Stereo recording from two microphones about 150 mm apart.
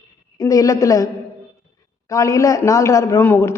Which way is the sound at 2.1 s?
20° left (ahead or behind).